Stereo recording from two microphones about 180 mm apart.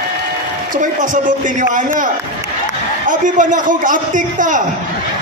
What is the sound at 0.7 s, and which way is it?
A man's voice, 45° right (ahead or behind).